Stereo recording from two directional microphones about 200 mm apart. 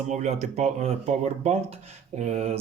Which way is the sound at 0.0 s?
35° right (ahead or behind).